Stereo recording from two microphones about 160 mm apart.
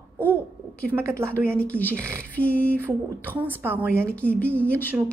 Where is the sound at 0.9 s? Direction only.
15° right (ahead or behind).